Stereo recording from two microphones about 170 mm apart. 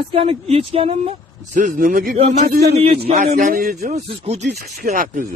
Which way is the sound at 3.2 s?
55° right (ahead or behind).